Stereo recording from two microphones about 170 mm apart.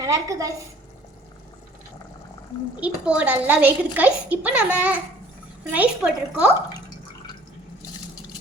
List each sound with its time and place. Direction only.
0.0 s a woman's voice: 20° right (ahead or behind)
2.8 s a woman's voice: 5° right (ahead or behind)